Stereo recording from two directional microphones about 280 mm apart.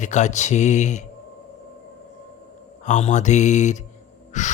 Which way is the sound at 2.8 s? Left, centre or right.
Left.